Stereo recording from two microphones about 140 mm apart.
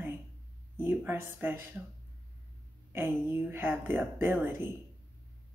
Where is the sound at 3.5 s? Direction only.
15° right (ahead or behind).